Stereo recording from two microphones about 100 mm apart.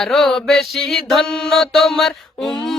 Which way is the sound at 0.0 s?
5° left (ahead or behind).